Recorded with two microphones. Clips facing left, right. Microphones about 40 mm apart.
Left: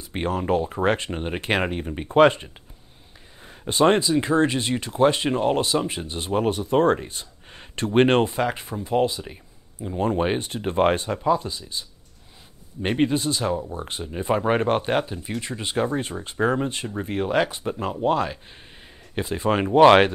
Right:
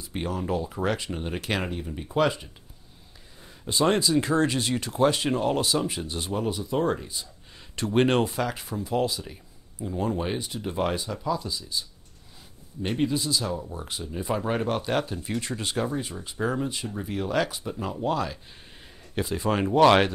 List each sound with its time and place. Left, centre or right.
0.0 s speech: left
4.0 s speech: left
9.9 s speech: left
12.8 s speech: left
15.0 s speech: centre
15.9 s speech: left